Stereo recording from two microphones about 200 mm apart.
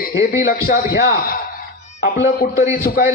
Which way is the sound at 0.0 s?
50° left (ahead or behind).